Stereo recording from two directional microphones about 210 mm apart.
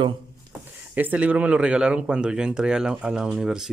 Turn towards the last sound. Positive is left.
turn(degrees=-5)  # may be behind; listen again after turning